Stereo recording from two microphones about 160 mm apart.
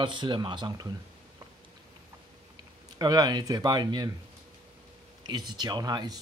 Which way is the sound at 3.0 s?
25° right (ahead or behind).